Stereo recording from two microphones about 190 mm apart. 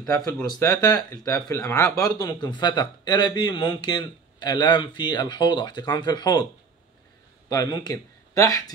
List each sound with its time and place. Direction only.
0.0 s a man's voice: 15° left (ahead or behind)
7.4 s speech: 20° left (ahead or behind)